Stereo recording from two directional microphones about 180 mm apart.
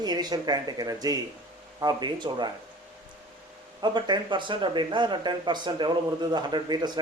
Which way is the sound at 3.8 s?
25° right (ahead or behind).